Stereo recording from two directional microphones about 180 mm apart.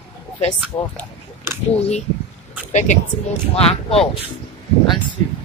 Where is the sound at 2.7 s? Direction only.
40° left (ahead or behind).